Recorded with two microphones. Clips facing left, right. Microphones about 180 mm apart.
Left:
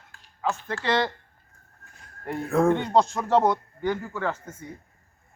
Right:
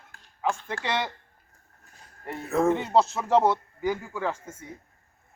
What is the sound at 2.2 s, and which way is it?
Speech, centre (ahead or behind).